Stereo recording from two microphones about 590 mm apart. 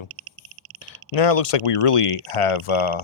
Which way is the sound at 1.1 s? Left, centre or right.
Left.